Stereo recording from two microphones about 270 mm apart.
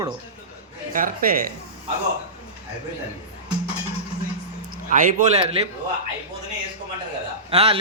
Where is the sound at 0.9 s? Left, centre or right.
Right.